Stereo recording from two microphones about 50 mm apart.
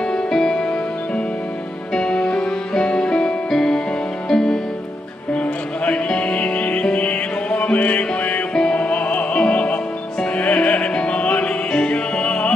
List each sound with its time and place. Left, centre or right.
0.1 s music: centre